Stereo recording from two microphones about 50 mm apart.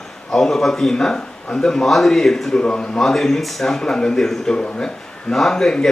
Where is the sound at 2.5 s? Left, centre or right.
Centre.